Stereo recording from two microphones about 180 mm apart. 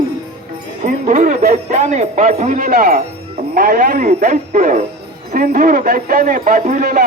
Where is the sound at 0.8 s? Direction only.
45° right (ahead or behind).